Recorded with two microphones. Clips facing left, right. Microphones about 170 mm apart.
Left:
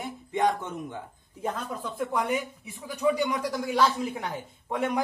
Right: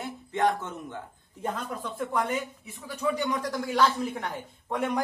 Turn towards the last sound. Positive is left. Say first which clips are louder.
# left 1 dB
turn(degrees=5)  # may be behind; listen again after turning